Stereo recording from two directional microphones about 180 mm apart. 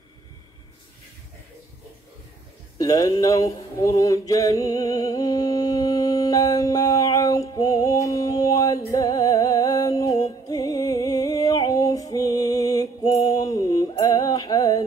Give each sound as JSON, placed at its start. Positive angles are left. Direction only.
{"t": 2.8, "sound": "mantra", "side_deg": 20}